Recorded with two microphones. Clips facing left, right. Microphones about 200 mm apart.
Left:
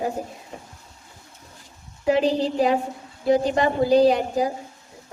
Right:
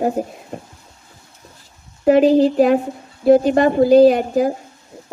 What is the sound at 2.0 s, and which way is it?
Speech, 50° right (ahead or behind).